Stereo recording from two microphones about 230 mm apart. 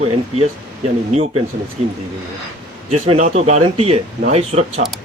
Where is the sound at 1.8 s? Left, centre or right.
Right.